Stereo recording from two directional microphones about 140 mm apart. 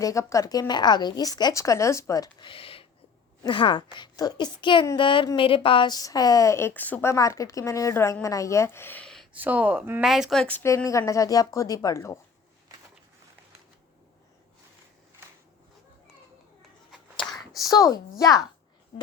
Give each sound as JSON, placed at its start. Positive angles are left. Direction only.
{"t": 0.0, "sound": "speech", "side_deg": 20}
{"t": 2.5, "sound": "a sound", "side_deg": 40}
{"t": 3.4, "sound": "a child's voice", "side_deg": 35}
{"t": 9.3, "sound": "speech", "side_deg": -10}
{"t": 10.0, "sound": "speech", "side_deg": 0}
{"t": 10.8, "sound": "speech", "side_deg": 20}
{"t": 17.7, "sound": "speech", "side_deg": 25}